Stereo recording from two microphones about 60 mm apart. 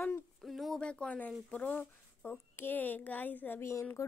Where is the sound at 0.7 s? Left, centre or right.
Centre.